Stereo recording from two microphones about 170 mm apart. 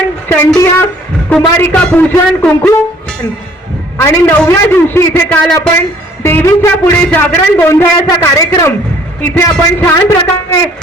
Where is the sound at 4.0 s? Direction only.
15° left (ahead or behind).